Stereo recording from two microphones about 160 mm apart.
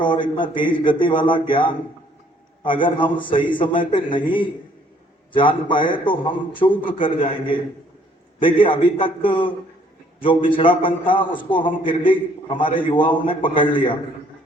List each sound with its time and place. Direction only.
0.0 s a man's voice: 30° left (ahead or behind)
2.6 s a man's voice: 30° left (ahead or behind)